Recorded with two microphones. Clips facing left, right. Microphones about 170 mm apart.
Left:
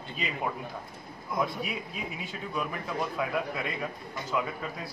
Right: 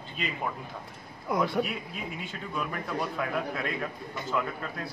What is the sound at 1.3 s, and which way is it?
Speech, 75° right (ahead or behind).